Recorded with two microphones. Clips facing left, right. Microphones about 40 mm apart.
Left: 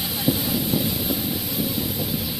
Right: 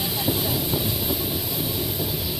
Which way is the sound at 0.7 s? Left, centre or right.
Right.